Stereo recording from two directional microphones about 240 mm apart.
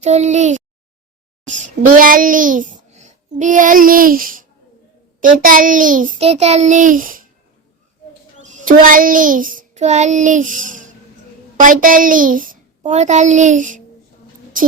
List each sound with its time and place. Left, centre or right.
0.0 s a child's voice: right
8.4 s child singing: right
11.6 s a child's voice: right